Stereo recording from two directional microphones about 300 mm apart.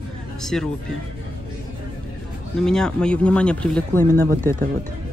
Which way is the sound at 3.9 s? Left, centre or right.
Right.